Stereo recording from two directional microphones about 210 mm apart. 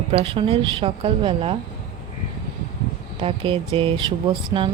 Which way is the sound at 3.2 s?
25° right (ahead or behind).